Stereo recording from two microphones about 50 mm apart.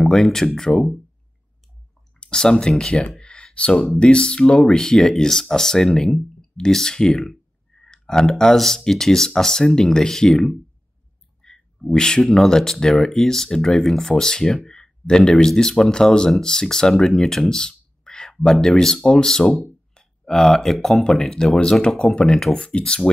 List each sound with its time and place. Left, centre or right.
0.0 s speech: centre
2.1 s speech: centre
3.2 s a sound: centre
3.7 s speech: centre
4.0 s speech: centre
22.1 s speech: left